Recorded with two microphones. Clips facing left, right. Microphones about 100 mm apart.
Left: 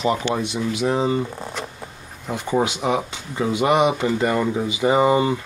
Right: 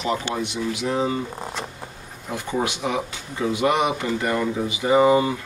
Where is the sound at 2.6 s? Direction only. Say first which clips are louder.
Left 2 dB; 20° left (ahead or behind).